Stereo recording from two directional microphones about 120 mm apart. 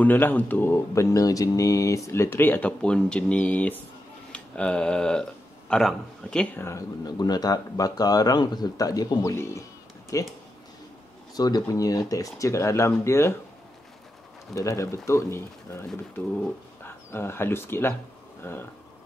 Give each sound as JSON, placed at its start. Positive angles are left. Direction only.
{"t": 0.0, "sound": "speech", "side_deg": 15}
{"t": 7.1, "sound": "speech", "side_deg": 35}
{"t": 9.3, "sound": "a sound", "side_deg": 25}
{"t": 11.3, "sound": "speech", "side_deg": 35}
{"t": 14.5, "sound": "speech", "side_deg": 25}
{"t": 16.8, "sound": "speech", "side_deg": 20}